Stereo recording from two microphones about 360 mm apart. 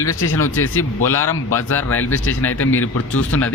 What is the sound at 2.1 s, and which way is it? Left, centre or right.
Speech, left.